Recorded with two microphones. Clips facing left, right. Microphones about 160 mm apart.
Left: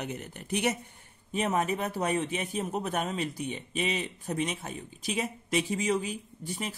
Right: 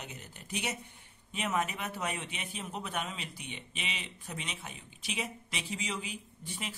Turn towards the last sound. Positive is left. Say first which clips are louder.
# left 6 dB
turn(degrees=45)  # may be behind; listen again after turning